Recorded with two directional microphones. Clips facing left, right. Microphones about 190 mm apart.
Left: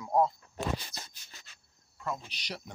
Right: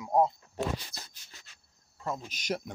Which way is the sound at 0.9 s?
60° right (ahead or behind).